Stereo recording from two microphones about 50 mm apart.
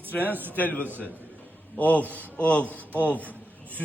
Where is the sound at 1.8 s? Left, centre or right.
Left.